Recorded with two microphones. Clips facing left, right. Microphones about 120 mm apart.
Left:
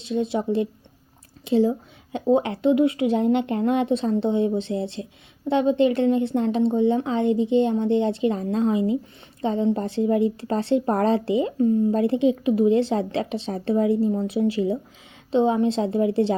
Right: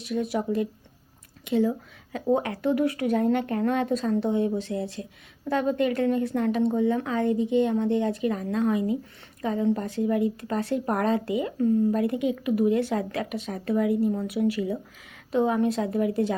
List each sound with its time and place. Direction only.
0.0 s a woman's voice: 25° left (ahead or behind)